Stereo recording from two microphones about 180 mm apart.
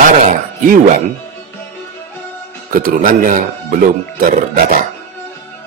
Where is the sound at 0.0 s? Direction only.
45° right (ahead or behind).